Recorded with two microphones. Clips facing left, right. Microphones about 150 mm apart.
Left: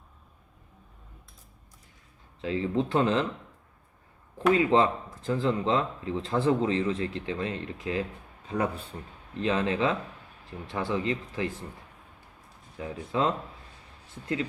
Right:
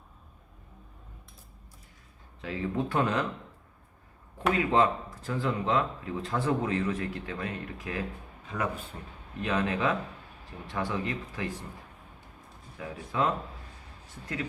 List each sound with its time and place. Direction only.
2.4 s speech: 25° left (ahead or behind)
4.5 s speech: 25° left (ahead or behind)
12.7 s speech: 25° left (ahead or behind)